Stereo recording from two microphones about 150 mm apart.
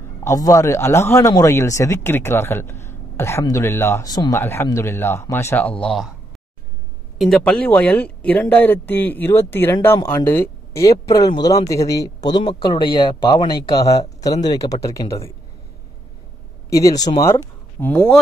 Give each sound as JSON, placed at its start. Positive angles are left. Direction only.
{"t": 0.2, "sound": "speech", "side_deg": 20}
{"t": 7.2, "sound": "speech", "side_deg": 0}
{"t": 16.7, "sound": "speech", "side_deg": 25}
{"t": 17.7, "sound": "speech", "side_deg": 10}